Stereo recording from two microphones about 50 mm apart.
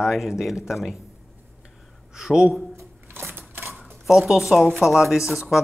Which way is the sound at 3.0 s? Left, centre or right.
Right.